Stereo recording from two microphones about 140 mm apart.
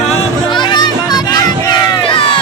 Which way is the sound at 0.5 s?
35° left (ahead or behind).